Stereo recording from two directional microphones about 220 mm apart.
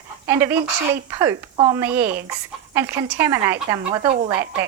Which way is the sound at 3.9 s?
25° right (ahead or behind).